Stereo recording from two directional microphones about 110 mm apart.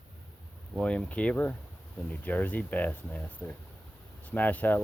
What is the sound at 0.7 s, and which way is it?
Speech, 10° left (ahead or behind).